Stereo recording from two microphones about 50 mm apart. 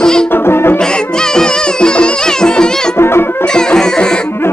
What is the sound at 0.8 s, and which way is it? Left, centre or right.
Music, centre.